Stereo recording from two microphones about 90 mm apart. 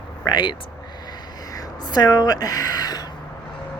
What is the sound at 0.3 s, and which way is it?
Speech, 60° left (ahead or behind).